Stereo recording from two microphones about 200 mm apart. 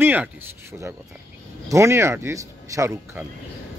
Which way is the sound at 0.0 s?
10° right (ahead or behind).